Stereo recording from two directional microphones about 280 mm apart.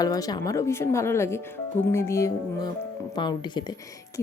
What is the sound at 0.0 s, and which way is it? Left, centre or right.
Speech, centre.